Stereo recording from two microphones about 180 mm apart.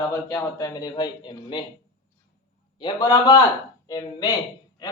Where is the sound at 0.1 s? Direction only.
15° left (ahead or behind).